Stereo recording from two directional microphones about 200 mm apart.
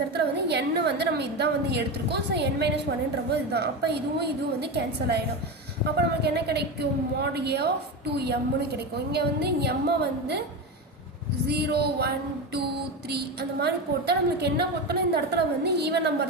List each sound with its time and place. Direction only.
0.1 s a woman's voice: 55° right (ahead or behind)
6.2 s a woman's voice: 55° right (ahead or behind)
11.4 s a woman's voice: 55° right (ahead or behind)